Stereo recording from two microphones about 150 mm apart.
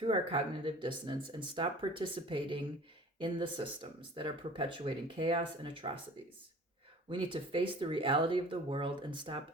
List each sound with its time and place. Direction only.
0.0 s speech: 35° right (ahead or behind)
7.1 s speech: 35° right (ahead or behind)